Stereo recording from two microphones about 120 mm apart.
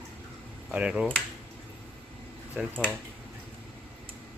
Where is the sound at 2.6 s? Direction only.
15° right (ahead or behind).